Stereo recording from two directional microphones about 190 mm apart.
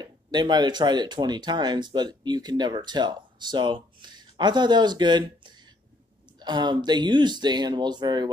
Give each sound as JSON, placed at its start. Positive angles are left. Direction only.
{"t": 0.0, "sound": "speech", "side_deg": -20}